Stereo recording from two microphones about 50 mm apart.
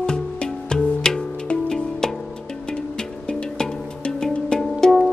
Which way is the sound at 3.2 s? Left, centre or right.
Centre.